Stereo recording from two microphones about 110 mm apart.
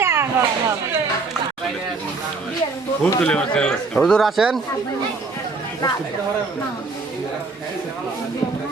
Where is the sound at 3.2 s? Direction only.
10° left (ahead or behind).